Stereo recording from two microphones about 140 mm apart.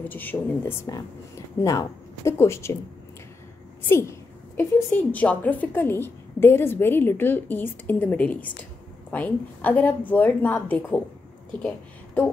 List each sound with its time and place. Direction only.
0.0 s a woman's voice: 15° left (ahead or behind)
3.9 s a woman's voice: 15° left (ahead or behind)